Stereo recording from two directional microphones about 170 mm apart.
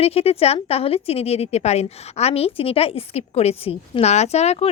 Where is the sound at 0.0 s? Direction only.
35° left (ahead or behind).